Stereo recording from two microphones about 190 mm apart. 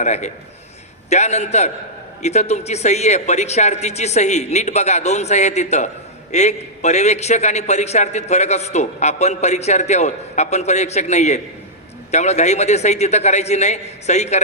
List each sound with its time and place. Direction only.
0.0 s a man's voice: 40° left (ahead or behind)